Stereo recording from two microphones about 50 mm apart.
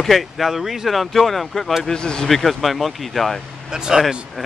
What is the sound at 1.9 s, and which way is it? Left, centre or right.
Speech, centre.